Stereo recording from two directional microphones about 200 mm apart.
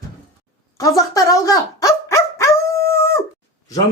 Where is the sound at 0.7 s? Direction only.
15° left (ahead or behind).